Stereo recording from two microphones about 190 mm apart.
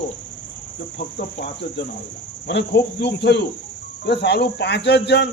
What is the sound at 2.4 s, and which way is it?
Speech, 65° left (ahead or behind).